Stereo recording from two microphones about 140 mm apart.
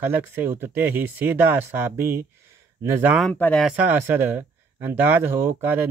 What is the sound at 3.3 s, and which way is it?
Speech, 10° left (ahead or behind).